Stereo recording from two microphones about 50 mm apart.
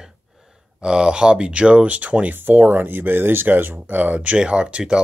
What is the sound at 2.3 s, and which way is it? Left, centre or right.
Speech, right.